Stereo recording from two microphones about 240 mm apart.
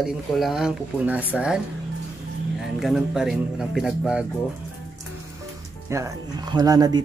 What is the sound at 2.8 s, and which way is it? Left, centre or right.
Speech, centre.